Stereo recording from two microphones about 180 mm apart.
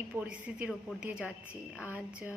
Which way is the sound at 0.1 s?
10° right (ahead or behind).